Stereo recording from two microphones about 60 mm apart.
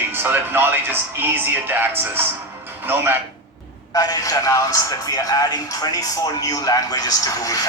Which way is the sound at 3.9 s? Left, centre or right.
Left.